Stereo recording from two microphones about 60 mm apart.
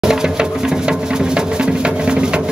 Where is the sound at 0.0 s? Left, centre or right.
Centre.